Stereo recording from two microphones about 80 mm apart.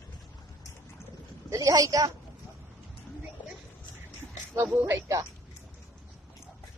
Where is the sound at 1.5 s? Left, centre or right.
Right.